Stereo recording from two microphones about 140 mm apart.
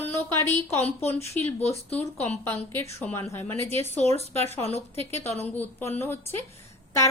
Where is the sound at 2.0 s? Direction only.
15° left (ahead or behind).